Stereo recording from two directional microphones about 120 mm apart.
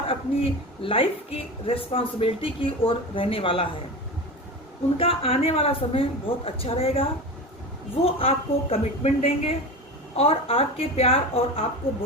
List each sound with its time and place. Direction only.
0.1 s a woman's voice: 50° left (ahead or behind)
4.9 s a woman's voice: 50° left (ahead or behind)